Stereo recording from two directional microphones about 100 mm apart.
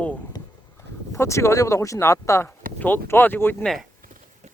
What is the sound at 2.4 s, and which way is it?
Speech, 20° left (ahead or behind).